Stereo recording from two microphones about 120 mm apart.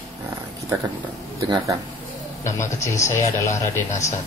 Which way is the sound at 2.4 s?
25° left (ahead or behind).